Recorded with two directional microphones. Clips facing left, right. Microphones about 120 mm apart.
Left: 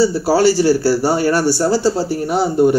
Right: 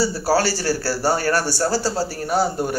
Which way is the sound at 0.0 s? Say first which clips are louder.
Left 6 dB; 15° left (ahead or behind).